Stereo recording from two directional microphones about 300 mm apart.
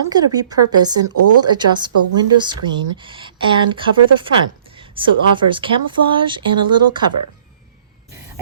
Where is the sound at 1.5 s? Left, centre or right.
Centre.